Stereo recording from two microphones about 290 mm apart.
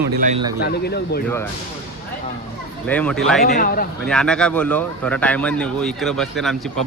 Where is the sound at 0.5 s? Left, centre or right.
Left.